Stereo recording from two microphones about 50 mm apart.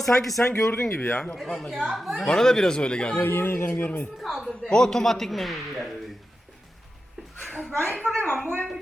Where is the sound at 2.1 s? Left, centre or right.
Centre.